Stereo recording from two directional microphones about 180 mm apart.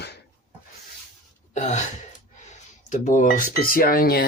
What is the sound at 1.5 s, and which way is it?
Throat clearing, 40° left (ahead or behind).